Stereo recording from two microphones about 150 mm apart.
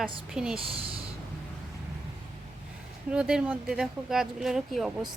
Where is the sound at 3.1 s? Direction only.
5° right (ahead or behind).